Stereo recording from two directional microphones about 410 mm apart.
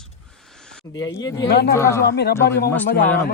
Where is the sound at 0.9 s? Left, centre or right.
Centre.